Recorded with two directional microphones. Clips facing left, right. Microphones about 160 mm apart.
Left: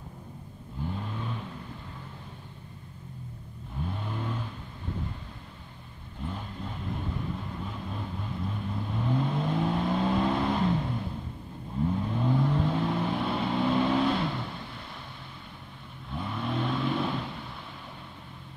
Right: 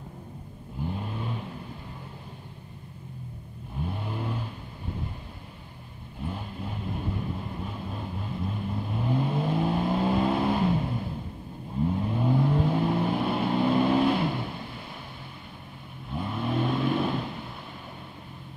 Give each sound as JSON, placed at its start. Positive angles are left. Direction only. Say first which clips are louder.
{"t": 0.8, "sound": "vehicle", "louder": "right 2 dB", "side_deg": -15}
{"t": 3.8, "sound": "vehicle", "louder": "right 2 dB", "side_deg": -10}
{"t": 6.2, "sound": "vehicle", "louder": "right 2 dB", "side_deg": -10}
{"t": 16.1, "sound": "vehicle", "louder": "right 3 dB", "side_deg": -5}